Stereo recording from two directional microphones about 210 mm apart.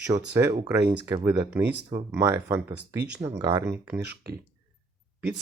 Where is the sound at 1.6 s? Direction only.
50° right (ahead or behind).